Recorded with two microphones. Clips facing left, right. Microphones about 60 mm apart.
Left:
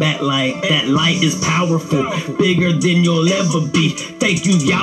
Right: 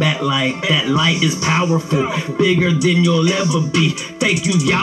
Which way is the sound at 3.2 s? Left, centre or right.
Right.